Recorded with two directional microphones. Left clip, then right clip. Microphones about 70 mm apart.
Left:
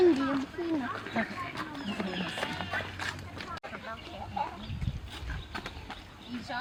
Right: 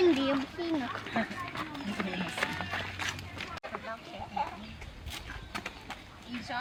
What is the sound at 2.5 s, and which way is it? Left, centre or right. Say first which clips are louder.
Music: left 1 dB; centre.